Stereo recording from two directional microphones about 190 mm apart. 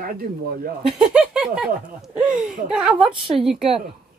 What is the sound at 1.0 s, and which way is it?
Speech, 5° right (ahead or behind).